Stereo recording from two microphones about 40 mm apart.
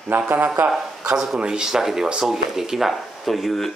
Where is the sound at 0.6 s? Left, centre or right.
Right.